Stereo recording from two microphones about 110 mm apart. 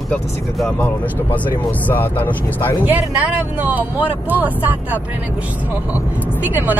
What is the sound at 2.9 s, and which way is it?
Speech, 15° right (ahead or behind).